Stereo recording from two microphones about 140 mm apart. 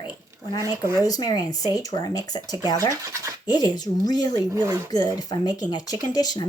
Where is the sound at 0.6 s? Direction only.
20° right (ahead or behind).